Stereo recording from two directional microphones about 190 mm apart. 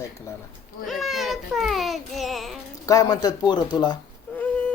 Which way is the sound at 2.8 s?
20° left (ahead or behind).